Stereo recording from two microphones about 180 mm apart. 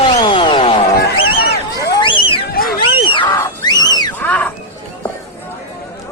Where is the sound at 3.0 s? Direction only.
25° left (ahead or behind).